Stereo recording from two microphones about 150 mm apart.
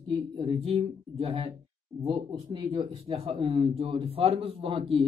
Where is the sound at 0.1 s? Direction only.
35° right (ahead or behind).